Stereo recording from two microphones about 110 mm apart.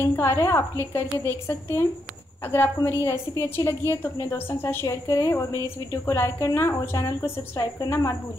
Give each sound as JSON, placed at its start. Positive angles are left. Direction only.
{"t": 0.0, "sound": "a woman's voice", "side_deg": 20}
{"t": 5.0, "sound": "a woman's voice", "side_deg": 35}